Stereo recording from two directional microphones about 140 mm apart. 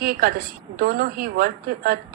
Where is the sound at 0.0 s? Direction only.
90° right.